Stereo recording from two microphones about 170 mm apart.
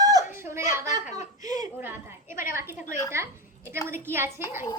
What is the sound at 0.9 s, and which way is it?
Speech, 45° left (ahead or behind).